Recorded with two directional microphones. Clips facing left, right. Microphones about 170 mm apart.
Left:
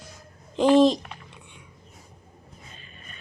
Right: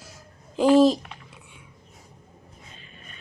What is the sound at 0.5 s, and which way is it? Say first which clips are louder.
Speech: right 1 dB; 5° right (ahead or behind).